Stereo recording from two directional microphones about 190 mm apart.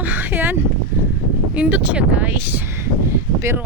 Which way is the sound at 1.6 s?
5° right (ahead or behind).